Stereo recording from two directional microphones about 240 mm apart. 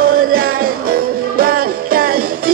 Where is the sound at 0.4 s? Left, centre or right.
Right.